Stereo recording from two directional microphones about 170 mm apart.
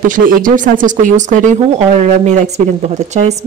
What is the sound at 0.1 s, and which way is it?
Speech, 50° right (ahead or behind).